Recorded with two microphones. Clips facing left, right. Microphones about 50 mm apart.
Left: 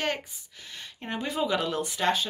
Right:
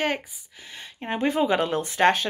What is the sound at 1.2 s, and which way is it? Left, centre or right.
Speech, right.